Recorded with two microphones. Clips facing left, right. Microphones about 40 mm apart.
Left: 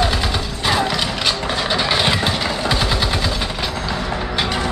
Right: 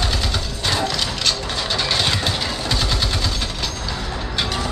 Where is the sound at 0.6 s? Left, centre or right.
Centre.